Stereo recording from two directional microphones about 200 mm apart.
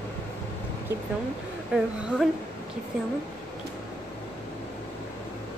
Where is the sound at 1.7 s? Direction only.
5° right (ahead or behind).